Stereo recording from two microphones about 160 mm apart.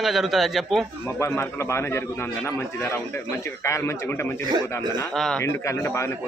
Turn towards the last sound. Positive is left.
turn(degrees=15)  # may be behind; listen again after turning